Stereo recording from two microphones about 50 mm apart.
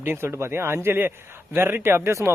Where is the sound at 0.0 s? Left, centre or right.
Right.